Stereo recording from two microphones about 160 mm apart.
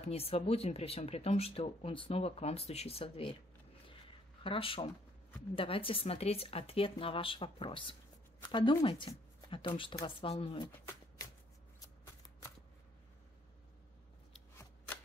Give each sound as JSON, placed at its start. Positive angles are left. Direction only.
{"t": 0.0, "sound": "speech", "side_deg": 40}
{"t": 4.4, "sound": "speech", "side_deg": 35}